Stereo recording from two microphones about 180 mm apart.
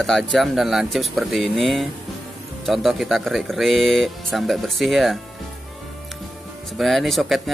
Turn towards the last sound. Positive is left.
turn(degrees=0)  # may be behind; listen again after turning